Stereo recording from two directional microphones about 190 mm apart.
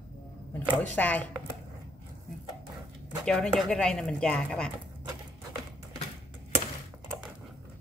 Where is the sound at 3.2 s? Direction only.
Centre (ahead or behind).